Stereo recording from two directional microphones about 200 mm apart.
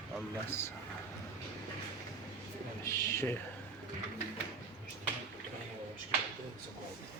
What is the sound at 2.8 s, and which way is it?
Speech, 15° left (ahead or behind).